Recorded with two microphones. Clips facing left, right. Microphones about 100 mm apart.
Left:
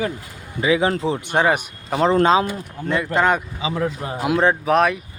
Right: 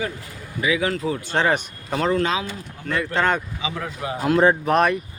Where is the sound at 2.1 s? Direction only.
35° left (ahead or behind).